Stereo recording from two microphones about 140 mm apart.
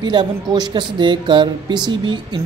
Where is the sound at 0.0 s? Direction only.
30° right (ahead or behind).